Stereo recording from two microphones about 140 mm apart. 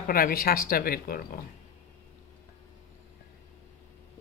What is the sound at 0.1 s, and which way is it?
Speech, 90° left.